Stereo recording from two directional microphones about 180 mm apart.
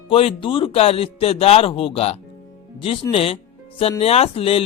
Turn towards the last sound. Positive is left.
turn(degrees=30)  # may be behind; listen again after turning